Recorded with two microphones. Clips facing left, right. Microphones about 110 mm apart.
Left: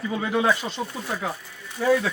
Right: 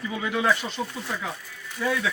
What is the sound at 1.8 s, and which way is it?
Speech, 35° left (ahead or behind).